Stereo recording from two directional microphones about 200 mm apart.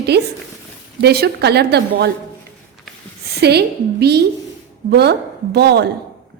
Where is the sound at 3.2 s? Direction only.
55° right (ahead or behind).